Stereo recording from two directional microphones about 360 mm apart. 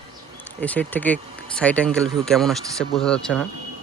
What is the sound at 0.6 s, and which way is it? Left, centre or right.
Speech, centre.